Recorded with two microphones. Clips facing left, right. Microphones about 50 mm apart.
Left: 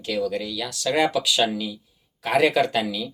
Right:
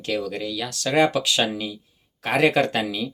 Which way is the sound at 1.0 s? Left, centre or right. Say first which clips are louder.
Left 1 dB; right.